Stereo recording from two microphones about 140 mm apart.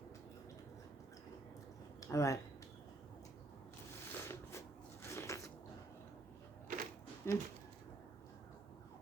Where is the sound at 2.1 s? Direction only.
20° left (ahead or behind).